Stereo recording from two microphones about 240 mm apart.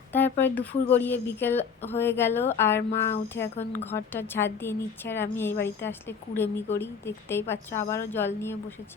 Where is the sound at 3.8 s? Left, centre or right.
Centre.